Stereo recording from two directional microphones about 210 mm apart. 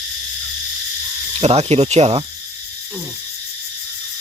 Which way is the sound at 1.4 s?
30° right (ahead or behind).